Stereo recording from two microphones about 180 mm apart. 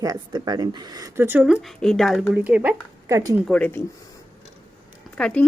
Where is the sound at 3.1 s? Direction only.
20° right (ahead or behind).